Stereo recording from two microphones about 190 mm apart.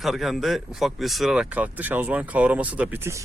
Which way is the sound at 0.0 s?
Centre (ahead or behind).